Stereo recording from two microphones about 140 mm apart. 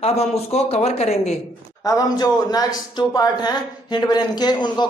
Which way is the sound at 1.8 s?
25° left (ahead or behind).